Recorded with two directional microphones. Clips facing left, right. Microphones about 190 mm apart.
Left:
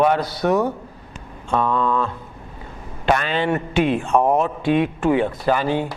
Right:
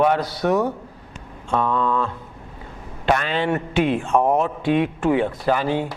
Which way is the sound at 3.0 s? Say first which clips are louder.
Left 1 dB; 15° left (ahead or behind).